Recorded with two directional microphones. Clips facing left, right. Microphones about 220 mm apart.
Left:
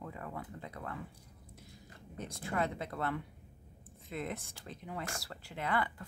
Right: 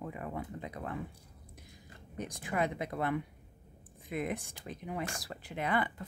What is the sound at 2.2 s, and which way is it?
Speech, 15° right (ahead or behind).